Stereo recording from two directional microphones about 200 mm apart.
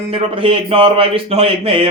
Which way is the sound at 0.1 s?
25° right (ahead or behind).